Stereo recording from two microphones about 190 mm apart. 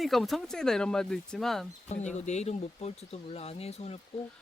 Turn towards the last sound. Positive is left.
turn(degrees=30)  # may be behind; listen again after turning